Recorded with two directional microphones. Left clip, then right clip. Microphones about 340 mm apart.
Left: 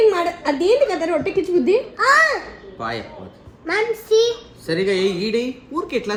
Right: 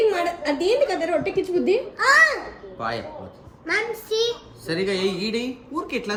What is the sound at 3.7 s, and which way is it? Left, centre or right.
Child singing, centre.